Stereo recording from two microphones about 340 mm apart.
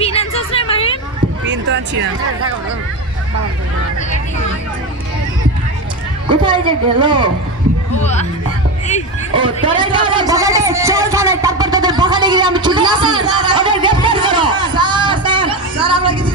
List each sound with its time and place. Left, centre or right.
0.0 s a sound: centre
1.4 s a sound: right
6.4 s speech: centre
8.0 s speech: centre
9.3 s speech: centre
14.5 s music: centre